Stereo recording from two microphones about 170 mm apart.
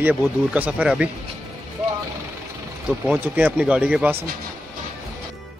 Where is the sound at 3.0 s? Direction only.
5° right (ahead or behind).